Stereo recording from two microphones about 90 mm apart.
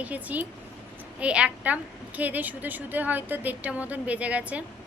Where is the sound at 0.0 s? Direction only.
15° right (ahead or behind).